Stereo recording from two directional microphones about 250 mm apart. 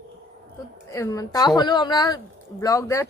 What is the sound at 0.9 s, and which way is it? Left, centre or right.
Speech, centre.